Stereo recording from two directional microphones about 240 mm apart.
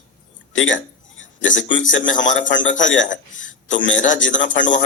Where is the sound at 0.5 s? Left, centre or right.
Left.